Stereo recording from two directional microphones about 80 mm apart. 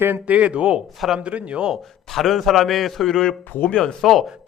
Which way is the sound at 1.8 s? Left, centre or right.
Centre.